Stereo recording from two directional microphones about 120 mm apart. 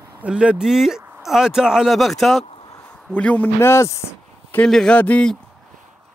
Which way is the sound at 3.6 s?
20° left (ahead or behind).